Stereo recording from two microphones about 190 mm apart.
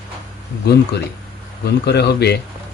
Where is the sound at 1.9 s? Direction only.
60° left (ahead or behind).